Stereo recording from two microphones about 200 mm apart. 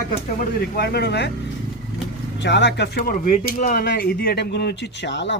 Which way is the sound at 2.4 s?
60° left (ahead or behind).